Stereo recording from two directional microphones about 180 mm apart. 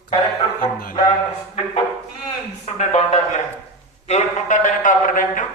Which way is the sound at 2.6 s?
40° left (ahead or behind).